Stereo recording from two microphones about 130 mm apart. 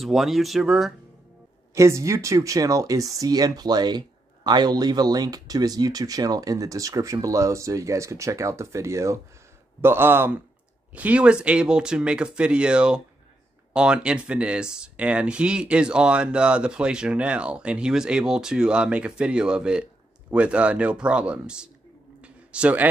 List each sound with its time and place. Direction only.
0.0 s speech: centre (ahead or behind)
1.8 s speech: 25° right (ahead or behind); by 21.6 s 10° right (ahead or behind)
22.2 s a sound: 10° right (ahead or behind)